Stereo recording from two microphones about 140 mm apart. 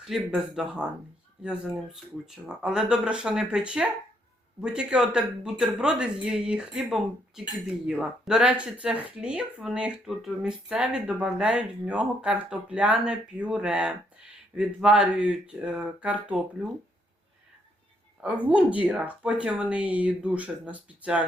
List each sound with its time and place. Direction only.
0.3 s speech: centre (ahead or behind)
18.4 s speech: 10° right (ahead or behind)